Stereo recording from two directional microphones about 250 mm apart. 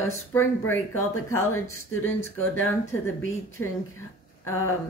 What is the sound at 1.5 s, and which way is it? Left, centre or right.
Speech, centre.